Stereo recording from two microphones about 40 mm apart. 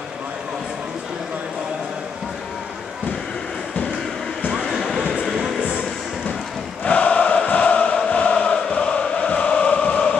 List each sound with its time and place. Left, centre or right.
4.6 s a sound: centre
6.8 s choir: left
7.4 s chant: left